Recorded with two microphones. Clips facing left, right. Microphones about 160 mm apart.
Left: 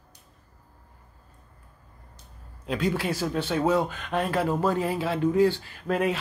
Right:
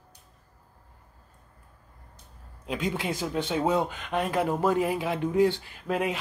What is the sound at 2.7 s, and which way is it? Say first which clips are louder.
Speech: left 3 dB; 15° right (ahead or behind).